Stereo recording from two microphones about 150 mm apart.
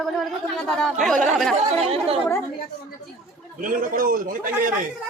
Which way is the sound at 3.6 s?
65° right (ahead or behind).